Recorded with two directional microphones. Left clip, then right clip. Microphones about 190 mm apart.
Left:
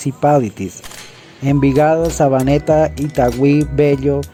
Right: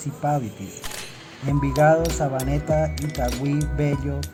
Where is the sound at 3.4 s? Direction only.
45° left (ahead or behind).